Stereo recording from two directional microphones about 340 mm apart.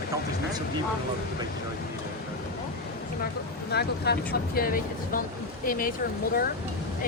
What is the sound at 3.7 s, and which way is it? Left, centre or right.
Speech, left.